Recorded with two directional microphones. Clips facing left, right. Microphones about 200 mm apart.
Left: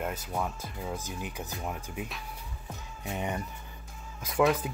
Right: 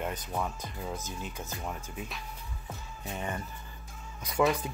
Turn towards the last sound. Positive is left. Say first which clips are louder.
# left 2 dB
turn(degrees=0)  # may be behind; listen again after turning